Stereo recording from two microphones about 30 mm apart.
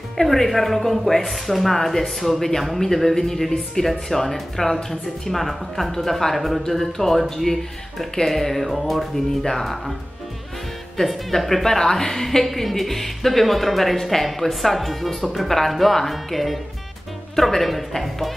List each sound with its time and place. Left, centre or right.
0.2 s speech: centre
8.3 s speech: centre
9.1 s speech: centre
11.0 s a woman's voice: left
11.3 s speech: centre
11.8 s a woman's voice: left
12.1 s speech: centre
17.6 s speech: centre